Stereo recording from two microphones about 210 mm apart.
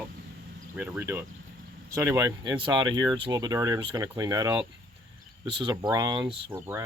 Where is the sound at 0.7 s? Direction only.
10° right (ahead or behind).